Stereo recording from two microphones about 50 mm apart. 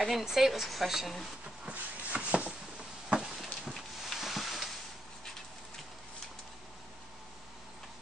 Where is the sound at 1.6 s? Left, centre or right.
Right.